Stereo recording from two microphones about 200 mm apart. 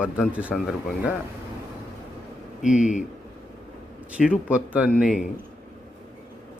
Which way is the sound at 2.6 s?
40° left (ahead or behind).